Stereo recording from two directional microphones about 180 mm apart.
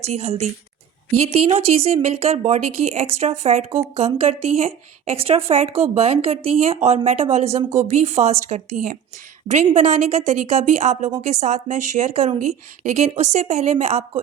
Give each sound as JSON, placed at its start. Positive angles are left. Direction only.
{"t": 0.0, "sound": "a woman's voice", "side_deg": -35}